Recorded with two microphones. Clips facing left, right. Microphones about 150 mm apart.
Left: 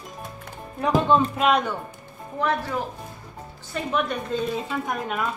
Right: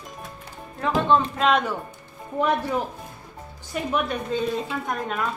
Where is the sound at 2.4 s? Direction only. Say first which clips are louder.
Right 2 dB; 20° right (ahead or behind).